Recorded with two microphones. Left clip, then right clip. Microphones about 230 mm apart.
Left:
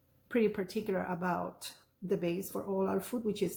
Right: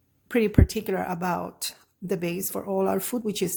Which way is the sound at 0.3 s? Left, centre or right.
Right.